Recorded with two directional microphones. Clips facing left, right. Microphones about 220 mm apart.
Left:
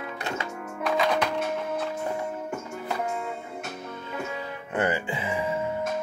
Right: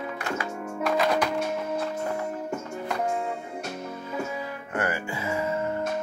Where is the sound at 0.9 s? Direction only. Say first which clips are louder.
Even; 5° right (ahead or behind).